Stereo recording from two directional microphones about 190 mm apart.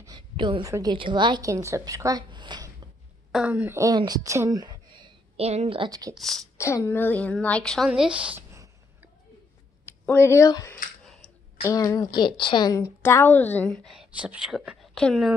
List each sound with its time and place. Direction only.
0.0 s a woman's voice: 25° right (ahead or behind)
3.3 s speech: 5° right (ahead or behind)
6.1 s a woman's voice: centre (ahead or behind)
6.6 s a woman's voice: 15° left (ahead or behind); by 8.5 s 5° right (ahead or behind)
9.8 s speech: 10° left (ahead or behind)
11.1 s a sound: 5° left (ahead or behind)
11.6 s a woman's voice: 15° left (ahead or behind); by 15.3 s centre (ahead or behind)